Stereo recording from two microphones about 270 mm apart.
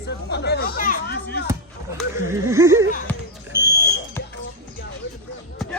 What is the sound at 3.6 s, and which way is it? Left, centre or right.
Smoke detector, centre.